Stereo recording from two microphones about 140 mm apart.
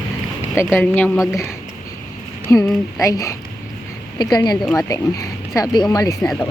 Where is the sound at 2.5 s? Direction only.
20° left (ahead or behind).